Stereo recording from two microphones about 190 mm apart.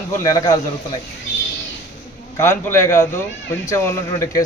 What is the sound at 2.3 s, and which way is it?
A man's voice, 15° left (ahead or behind).